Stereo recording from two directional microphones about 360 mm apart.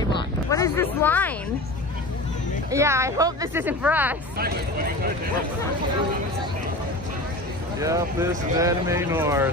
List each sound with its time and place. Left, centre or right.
0.0 s a sound: centre
2.7 s speech: centre
4.4 s speech: right
7.8 s speech: centre